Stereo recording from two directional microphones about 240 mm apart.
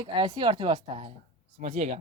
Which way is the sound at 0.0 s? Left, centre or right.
Centre.